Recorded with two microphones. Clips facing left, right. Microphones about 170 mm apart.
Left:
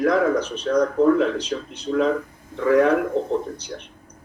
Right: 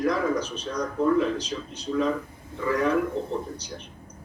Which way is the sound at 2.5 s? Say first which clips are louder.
Left 7 dB; 65° left (ahead or behind).